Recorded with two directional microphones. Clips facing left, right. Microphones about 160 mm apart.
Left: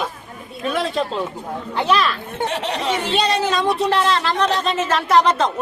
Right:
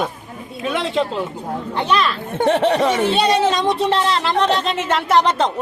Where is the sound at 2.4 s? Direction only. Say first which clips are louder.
Right 9 dB; 55° right (ahead or behind).